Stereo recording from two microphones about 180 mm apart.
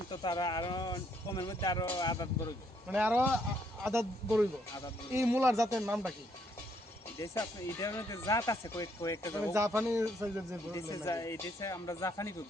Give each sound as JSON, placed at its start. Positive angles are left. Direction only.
{"t": 0.1, "sound": "speech", "side_deg": 25}
{"t": 2.9, "sound": "speech", "side_deg": -10}
{"t": 5.1, "sound": "speech", "side_deg": -15}
{"t": 7.2, "sound": "speech", "side_deg": 20}
{"t": 9.5, "sound": "speech", "side_deg": -15}
{"t": 10.8, "sound": "speech", "side_deg": 15}